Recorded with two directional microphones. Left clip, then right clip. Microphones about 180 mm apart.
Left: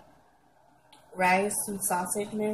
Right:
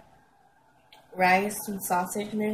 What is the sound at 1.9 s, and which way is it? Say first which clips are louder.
Speech: right 3 dB; 5° right (ahead or behind).